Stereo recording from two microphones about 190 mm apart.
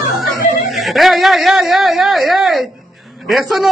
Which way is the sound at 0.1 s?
Centre (ahead or behind).